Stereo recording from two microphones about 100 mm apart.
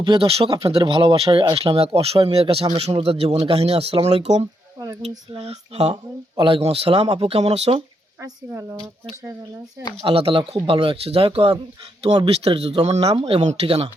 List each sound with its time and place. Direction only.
0.0 s speech: 50° right (ahead or behind)
0.3 s speech: 80° right
0.5 s speech: 70° right (ahead or behind); by 5.9 s 90° right
6.4 s speech: 70° right (ahead or behind); by 7.7 s 90° right
8.2 s speech: 30° right (ahead or behind)
10.1 s speech: 65° right (ahead or behind)
12.3 s speech: 80° right